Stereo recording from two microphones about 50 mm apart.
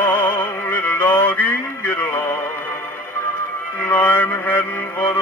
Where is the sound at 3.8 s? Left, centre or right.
Left.